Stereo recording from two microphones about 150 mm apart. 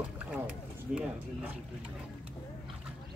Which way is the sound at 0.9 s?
5° right (ahead or behind).